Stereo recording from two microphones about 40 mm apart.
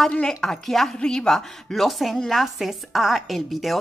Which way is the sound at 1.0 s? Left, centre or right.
Left.